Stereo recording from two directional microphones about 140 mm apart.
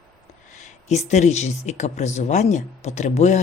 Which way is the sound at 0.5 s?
55° left (ahead or behind).